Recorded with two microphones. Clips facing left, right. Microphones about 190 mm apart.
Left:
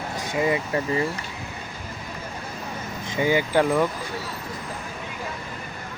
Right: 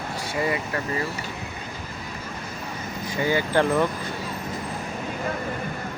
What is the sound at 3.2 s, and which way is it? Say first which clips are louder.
Speech: left 1 dB; 15° left (ahead or behind).